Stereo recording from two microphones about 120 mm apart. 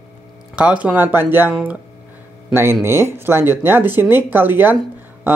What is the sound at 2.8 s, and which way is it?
Speech, 20° right (ahead or behind).